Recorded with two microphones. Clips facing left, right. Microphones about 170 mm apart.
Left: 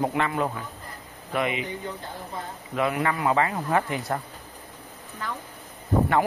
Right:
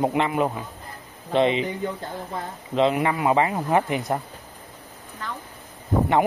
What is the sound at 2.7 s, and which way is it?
Speech, 20° right (ahead or behind).